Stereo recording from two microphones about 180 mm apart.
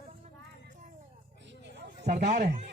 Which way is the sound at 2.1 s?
40° right (ahead or behind).